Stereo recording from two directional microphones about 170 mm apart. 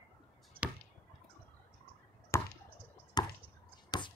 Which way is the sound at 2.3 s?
15° left (ahead or behind).